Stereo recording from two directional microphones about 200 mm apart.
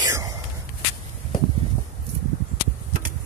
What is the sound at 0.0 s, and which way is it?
Whispering, 20° right (ahead or behind).